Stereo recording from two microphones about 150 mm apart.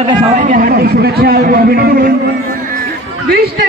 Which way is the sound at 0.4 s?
65° right (ahead or behind).